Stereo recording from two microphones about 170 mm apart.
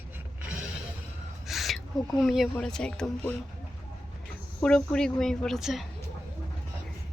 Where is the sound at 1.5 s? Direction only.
Centre (ahead or behind).